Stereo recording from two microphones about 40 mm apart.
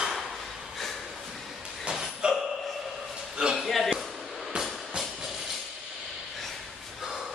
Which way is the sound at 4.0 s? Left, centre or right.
Centre.